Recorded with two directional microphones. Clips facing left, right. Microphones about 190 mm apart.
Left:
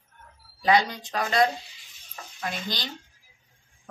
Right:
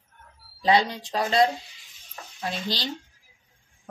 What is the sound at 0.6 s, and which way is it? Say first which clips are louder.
Speech: right 1 dB; 25° right (ahead or behind).